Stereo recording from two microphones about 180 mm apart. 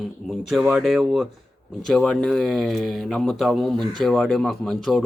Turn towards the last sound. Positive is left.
turn(degrees=0)  # may be behind; listen again after turning